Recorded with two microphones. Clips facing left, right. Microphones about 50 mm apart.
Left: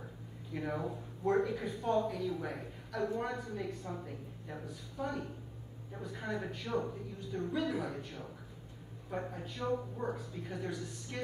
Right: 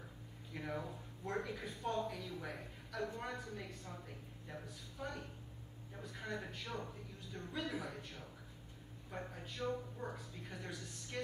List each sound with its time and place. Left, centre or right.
0.5 s speech: centre
1.4 s a woman's voice: centre
9.3 s a woman's voice: centre